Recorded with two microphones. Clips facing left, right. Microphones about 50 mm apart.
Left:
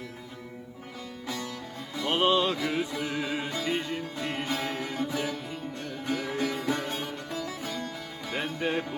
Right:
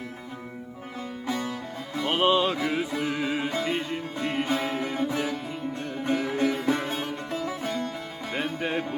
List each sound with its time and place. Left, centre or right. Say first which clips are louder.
1.3 s music: right 6 dB; right
2.0 s music: right 2 dB; centre
4.4 s music: right 4 dB; right
5.0 s music: right 3 dB; centre
5.8 s sitar: right 5 dB; centre
7.3 s music: right 5 dB; right
8.5 s music: right 1 dB; centre